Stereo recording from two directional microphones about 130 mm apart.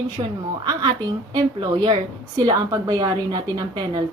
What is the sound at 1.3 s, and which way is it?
A woman's voice, 35° right (ahead or behind).